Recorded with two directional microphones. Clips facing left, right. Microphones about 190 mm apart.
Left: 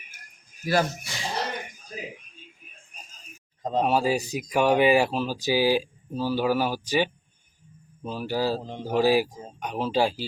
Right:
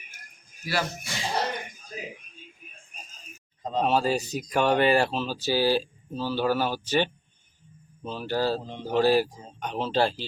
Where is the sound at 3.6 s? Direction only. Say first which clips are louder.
Left 3 dB; 45° left (ahead or behind).